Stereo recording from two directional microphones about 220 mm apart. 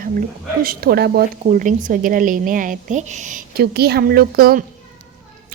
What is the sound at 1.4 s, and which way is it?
Speech, 35° right (ahead or behind).